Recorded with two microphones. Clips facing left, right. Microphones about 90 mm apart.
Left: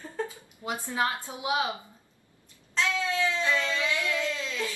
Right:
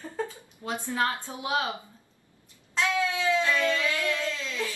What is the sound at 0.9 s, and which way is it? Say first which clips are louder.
Speech: right 1 dB; 15° left (ahead or behind).